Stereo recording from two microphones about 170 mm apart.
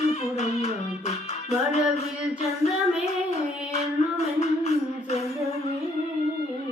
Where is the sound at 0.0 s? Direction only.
40° left (ahead or behind).